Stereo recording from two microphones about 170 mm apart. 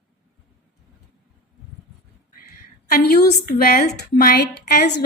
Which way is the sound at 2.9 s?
65° left (ahead or behind).